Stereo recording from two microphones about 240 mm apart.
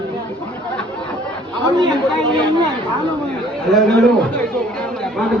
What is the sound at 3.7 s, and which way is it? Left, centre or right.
Speech, centre.